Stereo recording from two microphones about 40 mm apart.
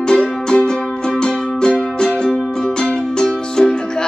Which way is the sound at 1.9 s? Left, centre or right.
Centre.